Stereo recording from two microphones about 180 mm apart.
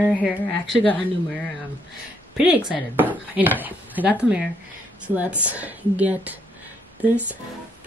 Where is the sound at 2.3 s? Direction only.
5° right (ahead or behind).